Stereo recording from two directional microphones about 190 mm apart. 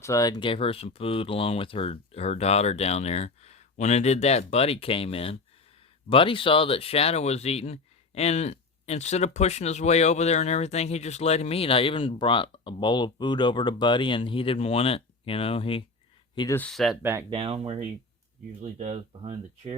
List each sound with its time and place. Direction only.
0.0 s speech: 15° left (ahead or behind)
16.6 s speech: 5° left (ahead or behind)
17.0 s speech: 10° right (ahead or behind)
17.2 s speech: 30° right (ahead or behind)